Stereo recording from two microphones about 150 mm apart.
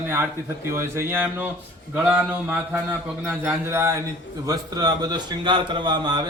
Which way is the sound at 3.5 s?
15° right (ahead or behind).